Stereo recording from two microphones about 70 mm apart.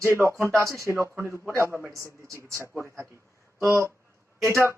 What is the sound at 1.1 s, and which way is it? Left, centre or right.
Speech, right.